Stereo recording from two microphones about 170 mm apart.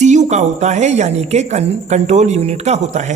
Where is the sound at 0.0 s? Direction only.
45° right (ahead or behind).